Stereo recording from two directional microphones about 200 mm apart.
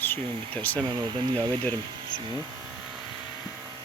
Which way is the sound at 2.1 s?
70° left (ahead or behind).